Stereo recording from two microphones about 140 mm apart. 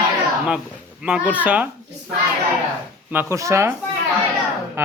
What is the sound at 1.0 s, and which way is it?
Speech, 10° right (ahead or behind).